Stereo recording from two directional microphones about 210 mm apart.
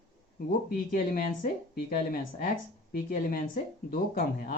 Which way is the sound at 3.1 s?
45° left (ahead or behind).